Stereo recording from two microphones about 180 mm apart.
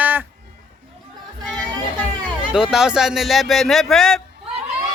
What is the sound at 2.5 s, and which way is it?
Speech, 5° right (ahead or behind).